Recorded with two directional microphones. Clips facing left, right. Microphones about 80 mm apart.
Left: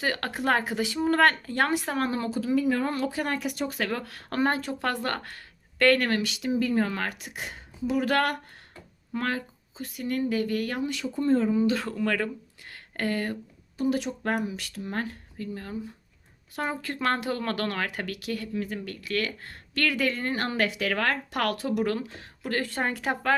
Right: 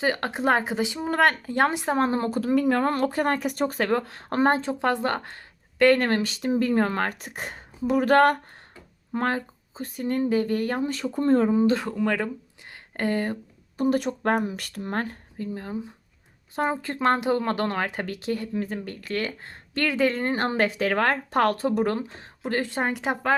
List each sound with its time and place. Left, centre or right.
0.0 s speech: right
2.3 s speech: right
11.5 s speech: right
11.9 s speech: centre
13.7 s speech: right
15.4 s speech: right